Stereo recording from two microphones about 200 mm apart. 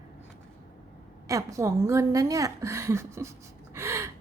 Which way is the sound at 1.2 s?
15° right (ahead or behind).